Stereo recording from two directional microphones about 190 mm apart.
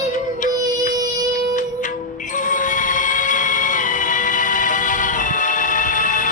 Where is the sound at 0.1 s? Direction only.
40° left (ahead or behind).